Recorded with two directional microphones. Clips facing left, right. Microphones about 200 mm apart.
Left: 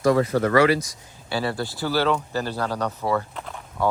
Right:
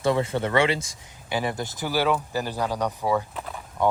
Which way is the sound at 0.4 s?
25° right (ahead or behind).